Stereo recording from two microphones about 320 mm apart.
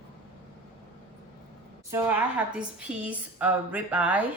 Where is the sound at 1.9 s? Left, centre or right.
Centre.